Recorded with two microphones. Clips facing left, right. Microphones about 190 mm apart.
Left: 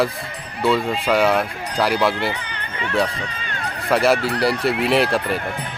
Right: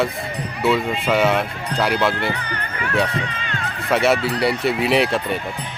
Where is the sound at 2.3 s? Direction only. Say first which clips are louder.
Right 3 dB; 20° left (ahead or behind).